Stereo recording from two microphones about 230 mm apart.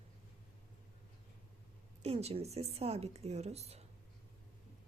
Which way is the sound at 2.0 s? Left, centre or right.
Right.